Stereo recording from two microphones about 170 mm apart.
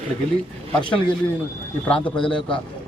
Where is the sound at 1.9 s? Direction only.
5° left (ahead or behind).